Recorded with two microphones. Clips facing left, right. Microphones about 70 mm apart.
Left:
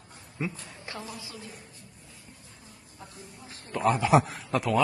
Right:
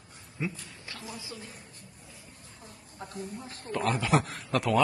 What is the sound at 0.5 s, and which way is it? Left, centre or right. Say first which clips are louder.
Speech: left 4 dB; left.